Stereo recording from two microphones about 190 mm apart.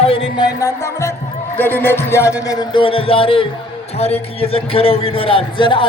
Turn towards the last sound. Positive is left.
turn(degrees=25)  # may be behind; listen again after turning